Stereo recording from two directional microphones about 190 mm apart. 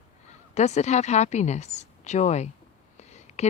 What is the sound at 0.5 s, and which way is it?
Speech, 35° left (ahead or behind).